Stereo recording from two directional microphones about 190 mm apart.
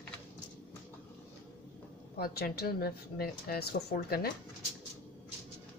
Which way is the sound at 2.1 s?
55° left (ahead or behind).